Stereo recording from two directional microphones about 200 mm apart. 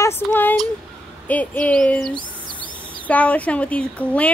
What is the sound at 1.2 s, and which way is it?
Speech, 5° left (ahead or behind).